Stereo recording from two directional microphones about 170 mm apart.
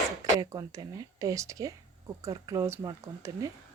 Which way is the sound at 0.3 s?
20° right (ahead or behind).